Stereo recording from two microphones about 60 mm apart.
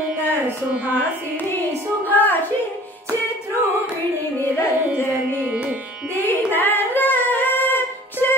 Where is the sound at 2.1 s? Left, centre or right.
Left.